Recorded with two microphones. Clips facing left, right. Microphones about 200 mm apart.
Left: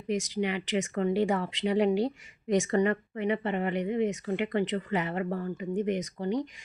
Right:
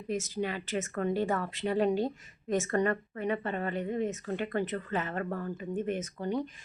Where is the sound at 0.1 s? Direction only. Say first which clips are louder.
Left 3 dB; 15° left (ahead or behind).